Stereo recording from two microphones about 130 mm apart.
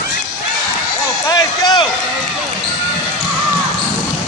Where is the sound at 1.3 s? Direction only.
30° left (ahead or behind).